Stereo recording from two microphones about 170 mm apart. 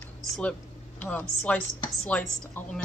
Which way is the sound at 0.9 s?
10° left (ahead or behind).